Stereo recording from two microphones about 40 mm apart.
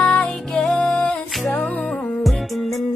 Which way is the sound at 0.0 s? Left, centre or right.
Left.